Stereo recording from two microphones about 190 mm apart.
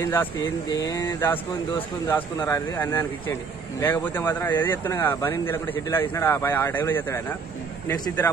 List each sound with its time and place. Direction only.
0.0 s speech: 10° left (ahead or behind)
0.7 s a sound: 20° left (ahead or behind)
2.0 s speech: 10° left (ahead or behind)